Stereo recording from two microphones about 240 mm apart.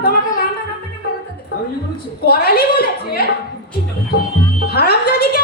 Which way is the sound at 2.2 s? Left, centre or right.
Left.